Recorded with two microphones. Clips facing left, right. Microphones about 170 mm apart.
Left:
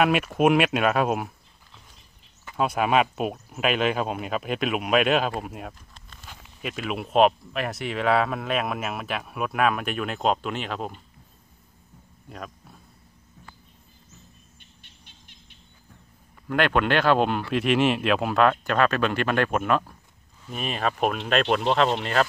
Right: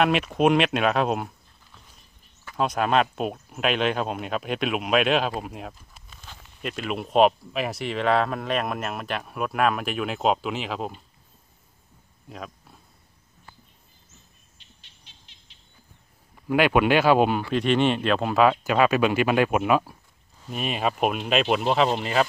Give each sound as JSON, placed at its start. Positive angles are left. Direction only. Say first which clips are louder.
{"t": 0.0, "sound": "speech", "louder": "even", "side_deg": 5}
{"t": 6.2, "sound": "speech", "louder": "right 1 dB", "side_deg": 5}
{"t": 12.3, "sound": "speech", "louder": "even", "side_deg": 0}
{"t": 14.6, "sound": "insect", "louder": "left 3 dB", "side_deg": 55}
{"t": 16.4, "sound": "speech", "louder": "right 3 dB", "side_deg": -10}